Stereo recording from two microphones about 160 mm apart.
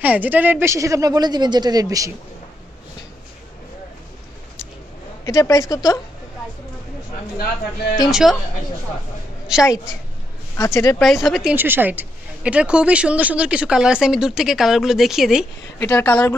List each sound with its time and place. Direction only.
0.0 s a woman's voice: 10° right (ahead or behind)
5.2 s speech: 20° left (ahead or behind)
8.1 s a woman's voice: 5° right (ahead or behind)
10.5 s speech: 20° left (ahead or behind)
11.0 s a woman's voice: centre (ahead or behind)
15.8 s speech: 15° left (ahead or behind)